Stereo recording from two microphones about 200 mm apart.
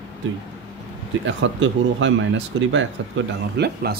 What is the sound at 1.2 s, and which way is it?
Speech, 65° right (ahead or behind).